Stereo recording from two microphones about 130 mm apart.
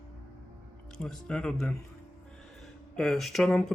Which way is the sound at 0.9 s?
5° left (ahead or behind).